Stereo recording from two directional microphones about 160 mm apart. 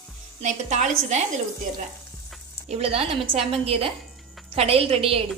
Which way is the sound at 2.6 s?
40° right (ahead or behind).